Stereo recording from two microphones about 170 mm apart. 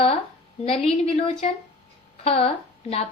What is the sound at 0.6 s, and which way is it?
Speech, 35° left (ahead or behind).